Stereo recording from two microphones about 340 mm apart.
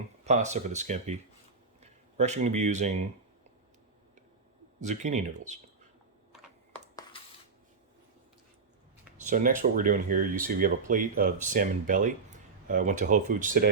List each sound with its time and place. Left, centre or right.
0.3 s speech: right
4.8 s speech: right
6.7 s a sound: centre
9.2 s speech: right